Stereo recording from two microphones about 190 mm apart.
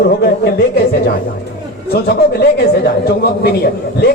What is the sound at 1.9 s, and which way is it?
A man's voice, 55° left (ahead or behind).